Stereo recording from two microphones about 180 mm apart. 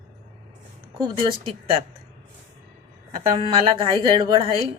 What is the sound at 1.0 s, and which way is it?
Speech, 30° right (ahead or behind).